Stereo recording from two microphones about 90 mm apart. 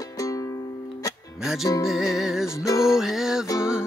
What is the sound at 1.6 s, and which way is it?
Music, 35° left (ahead or behind).